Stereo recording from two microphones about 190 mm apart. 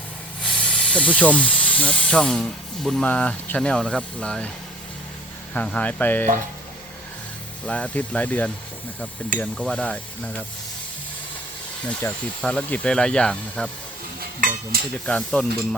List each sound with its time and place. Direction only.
0.4 s speech: 5° left (ahead or behind)
5.5 s speech: 5° left (ahead or behind)
7.7 s speech: 5° left (ahead or behind)
11.9 s speech: 5° left (ahead or behind)
14.2 s a sound: 50° right (ahead or behind)
15.0 s speech: 5° left (ahead or behind)